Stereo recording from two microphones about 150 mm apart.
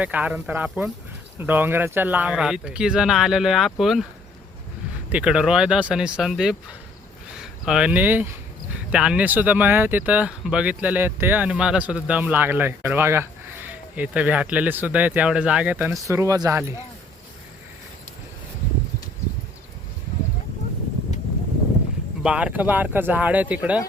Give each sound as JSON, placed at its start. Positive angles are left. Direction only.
{"t": 0.0, "sound": "speech", "side_deg": -10}
{"t": 5.0, "sound": "speech", "side_deg": -10}
{"t": 16.0, "sound": "speech", "side_deg": -20}
{"t": 22.2, "sound": "speech", "side_deg": -5}